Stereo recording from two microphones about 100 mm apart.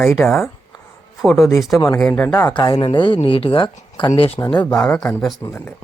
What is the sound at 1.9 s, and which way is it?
Speech, 10° left (ahead or behind).